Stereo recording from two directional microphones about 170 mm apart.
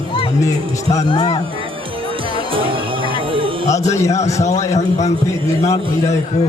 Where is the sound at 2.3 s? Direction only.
30° right (ahead or behind).